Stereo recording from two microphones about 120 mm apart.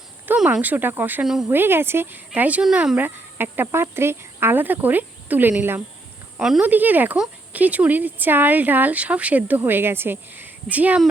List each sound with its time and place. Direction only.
0.3 s speech: 10° right (ahead or behind)
1.2 s speech: 5° right (ahead or behind)
1.5 s speech: 20° right (ahead or behind)